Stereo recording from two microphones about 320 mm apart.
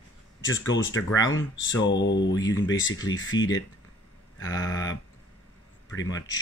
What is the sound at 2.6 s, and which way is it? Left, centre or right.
Speech, left.